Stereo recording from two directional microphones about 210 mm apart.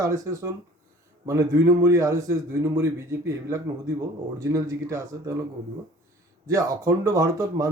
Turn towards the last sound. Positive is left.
turn(degrees=-15)  # may be behind; listen again after turning